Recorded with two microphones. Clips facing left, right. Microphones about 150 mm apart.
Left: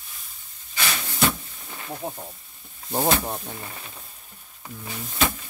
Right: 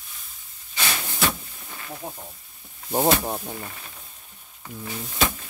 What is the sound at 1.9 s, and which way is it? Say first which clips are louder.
Speech: left 4 dB; 20° left (ahead or behind).